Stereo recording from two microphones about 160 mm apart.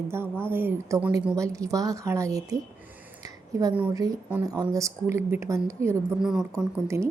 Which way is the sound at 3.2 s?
20° right (ahead or behind).